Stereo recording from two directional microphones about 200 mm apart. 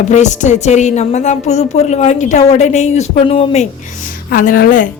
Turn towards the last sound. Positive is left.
turn(degrees=45)  # may be behind; listen again after turning